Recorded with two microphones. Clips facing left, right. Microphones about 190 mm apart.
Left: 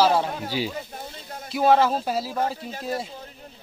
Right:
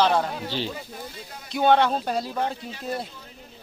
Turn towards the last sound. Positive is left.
turn(degrees=0)  # may be behind; listen again after turning